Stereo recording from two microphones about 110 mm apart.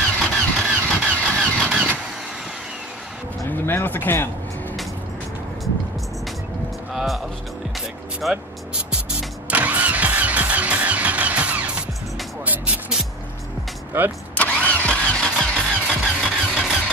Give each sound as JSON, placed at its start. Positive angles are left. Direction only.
{"t": 0.2, "sound": "vehicle", "side_deg": 5}
{"t": 1.4, "sound": "vehicle", "side_deg": -5}
{"t": 3.6, "sound": "speech", "side_deg": 20}
{"t": 6.9, "sound": "music", "side_deg": 0}
{"t": 8.2, "sound": "vehicle", "side_deg": -5}
{"t": 12.4, "sound": "music", "side_deg": -15}
{"t": 13.9, "sound": "speech", "side_deg": -20}
{"t": 14.3, "sound": "vehicle", "side_deg": 15}
{"t": 15.9, "sound": "vehicle", "side_deg": -10}